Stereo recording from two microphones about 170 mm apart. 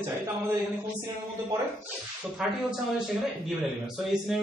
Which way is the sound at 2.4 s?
5° right (ahead or behind).